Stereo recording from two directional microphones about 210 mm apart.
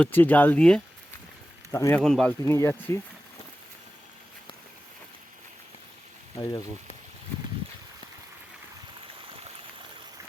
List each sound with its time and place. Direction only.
0.0 s speech: 10° left (ahead or behind)
2.0 s speech: 5° left (ahead or behind)
2.4 s speech: 15° left (ahead or behind)
6.3 s speech: 15° left (ahead or behind)